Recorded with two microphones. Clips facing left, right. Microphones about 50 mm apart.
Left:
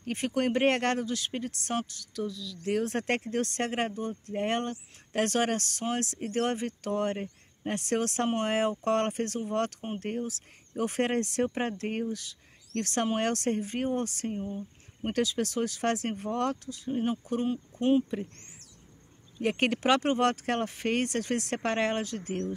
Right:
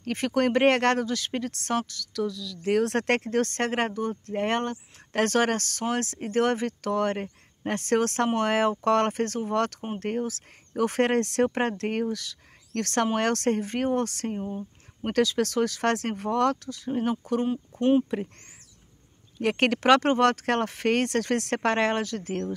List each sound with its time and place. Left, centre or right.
0.0 s speech: right
2.7 s speech: right
14.3 s speech: right
15.0 s speech: right
19.4 s speech: right